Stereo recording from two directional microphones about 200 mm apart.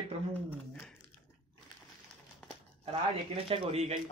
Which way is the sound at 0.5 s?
10° left (ahead or behind).